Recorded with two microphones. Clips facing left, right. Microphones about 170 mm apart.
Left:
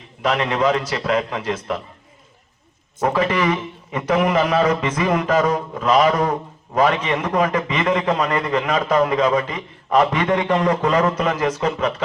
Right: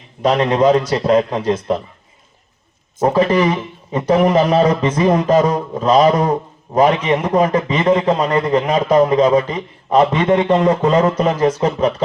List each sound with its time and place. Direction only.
0.2 s a man's voice: 40° right (ahead or behind)
3.0 s a man's voice: 30° right (ahead or behind)
3.4 s speech: 10° right (ahead or behind)
3.9 s a man's voice: 30° right (ahead or behind)